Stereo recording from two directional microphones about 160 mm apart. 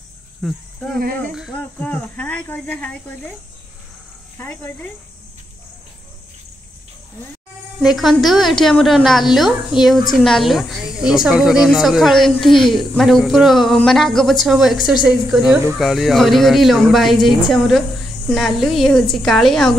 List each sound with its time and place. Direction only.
0.4 s speech: centre (ahead or behind)
0.9 s speech: 65° right (ahead or behind)
1.3 s speech: 5° right (ahead or behind)
1.6 s speech: 10° left (ahead or behind)
4.4 s speech: 10° left (ahead or behind)
7.8 s speech: centre (ahead or behind)